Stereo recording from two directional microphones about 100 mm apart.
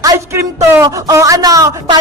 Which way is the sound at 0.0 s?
35° right (ahead or behind).